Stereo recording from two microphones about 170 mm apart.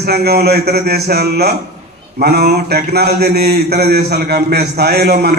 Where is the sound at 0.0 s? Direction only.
65° right (ahead or behind).